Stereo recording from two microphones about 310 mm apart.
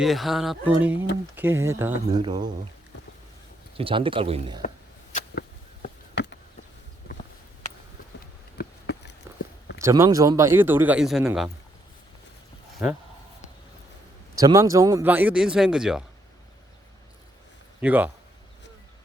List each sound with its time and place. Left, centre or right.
0.0 s a man's voice: centre
3.8 s a man's voice: centre
5.1 s a sound: left
8.5 s insect: left
9.8 s a man's voice: centre
14.3 s speech: centre
17.7 s speech: centre